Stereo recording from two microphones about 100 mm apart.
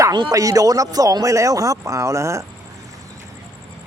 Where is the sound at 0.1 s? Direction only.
40° right (ahead or behind).